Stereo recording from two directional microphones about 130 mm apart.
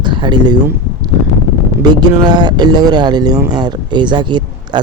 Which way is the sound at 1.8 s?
35° right (ahead or behind).